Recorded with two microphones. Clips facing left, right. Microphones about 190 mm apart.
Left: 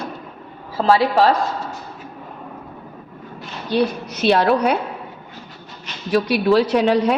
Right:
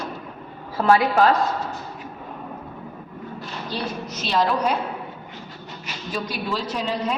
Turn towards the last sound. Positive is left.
turn(degrees=70)  # may be behind; listen again after turning